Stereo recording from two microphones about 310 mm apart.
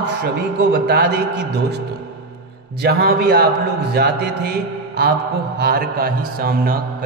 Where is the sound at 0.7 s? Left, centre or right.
Right.